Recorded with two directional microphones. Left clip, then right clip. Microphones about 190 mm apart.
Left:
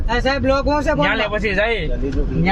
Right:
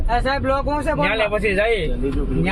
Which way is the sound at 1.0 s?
35° left (ahead or behind).